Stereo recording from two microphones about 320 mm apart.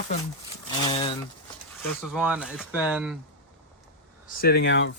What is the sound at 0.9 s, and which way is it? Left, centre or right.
Speech, centre.